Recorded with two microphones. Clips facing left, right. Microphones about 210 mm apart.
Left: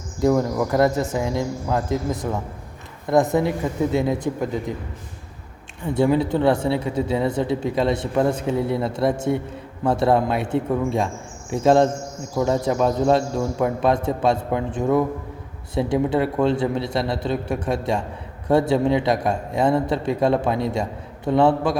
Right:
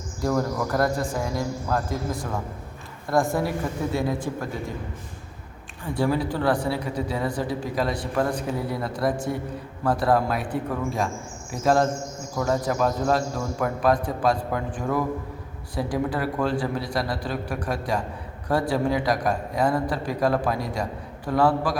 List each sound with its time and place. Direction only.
0.2 s speech: 15° left (ahead or behind)
5.8 s speech: 20° left (ahead or behind)